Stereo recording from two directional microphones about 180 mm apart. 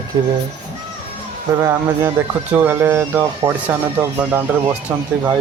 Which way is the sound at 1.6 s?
15° right (ahead or behind).